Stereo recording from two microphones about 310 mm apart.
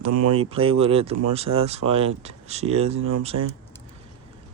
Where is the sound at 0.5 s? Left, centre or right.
Centre.